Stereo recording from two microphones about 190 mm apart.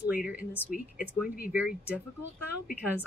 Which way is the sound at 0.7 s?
45° left (ahead or behind).